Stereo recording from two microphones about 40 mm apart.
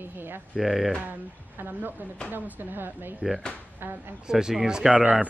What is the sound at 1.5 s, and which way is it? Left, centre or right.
Speech, right.